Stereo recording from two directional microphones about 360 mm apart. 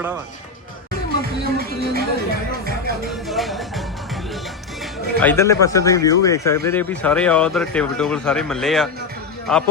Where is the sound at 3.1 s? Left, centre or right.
Centre.